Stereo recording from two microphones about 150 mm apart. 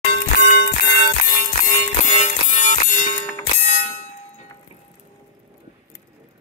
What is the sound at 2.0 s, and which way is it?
Music, 50° left (ahead or behind).